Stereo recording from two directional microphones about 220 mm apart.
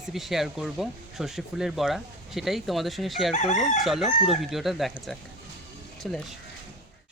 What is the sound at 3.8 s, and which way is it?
Speech, centre (ahead or behind).